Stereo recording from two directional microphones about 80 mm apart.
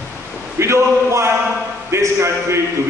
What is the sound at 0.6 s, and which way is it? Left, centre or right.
A man's voice, right.